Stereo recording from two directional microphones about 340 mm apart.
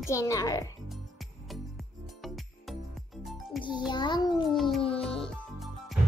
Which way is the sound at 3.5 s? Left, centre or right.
Centre.